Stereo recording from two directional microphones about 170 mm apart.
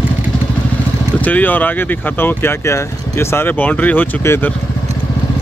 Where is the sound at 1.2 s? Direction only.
10° left (ahead or behind).